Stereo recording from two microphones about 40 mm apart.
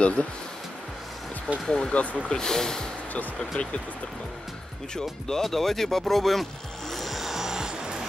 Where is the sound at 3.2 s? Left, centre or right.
Left.